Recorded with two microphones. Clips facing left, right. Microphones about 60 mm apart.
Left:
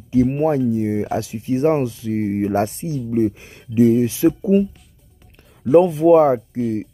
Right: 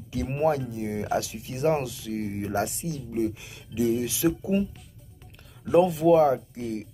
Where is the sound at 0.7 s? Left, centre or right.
Left.